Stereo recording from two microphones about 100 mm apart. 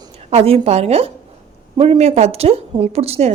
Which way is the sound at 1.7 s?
70° right (ahead or behind).